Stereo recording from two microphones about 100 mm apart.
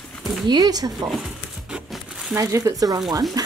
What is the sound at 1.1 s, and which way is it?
Crumpling, 5° right (ahead or behind).